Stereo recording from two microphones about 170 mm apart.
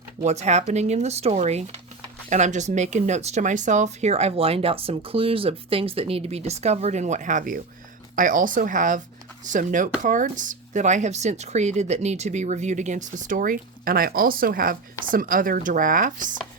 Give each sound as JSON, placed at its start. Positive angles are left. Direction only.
{"t": 0.2, "sound": "speech", "side_deg": -40}